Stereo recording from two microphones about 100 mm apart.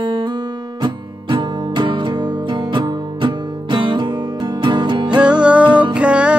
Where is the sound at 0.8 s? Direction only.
50° right (ahead or behind).